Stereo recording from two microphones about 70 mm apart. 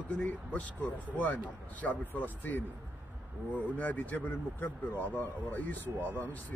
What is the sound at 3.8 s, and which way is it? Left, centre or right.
Speech, left.